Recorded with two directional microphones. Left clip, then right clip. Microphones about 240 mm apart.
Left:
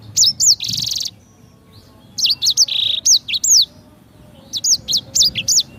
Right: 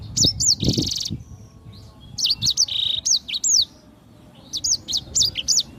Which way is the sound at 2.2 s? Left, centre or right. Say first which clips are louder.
Left 5 dB; centre.